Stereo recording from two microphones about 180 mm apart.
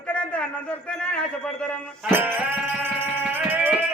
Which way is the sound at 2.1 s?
10° right (ahead or behind).